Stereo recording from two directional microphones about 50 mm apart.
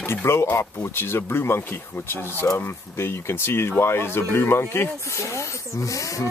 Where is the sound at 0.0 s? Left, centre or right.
Left.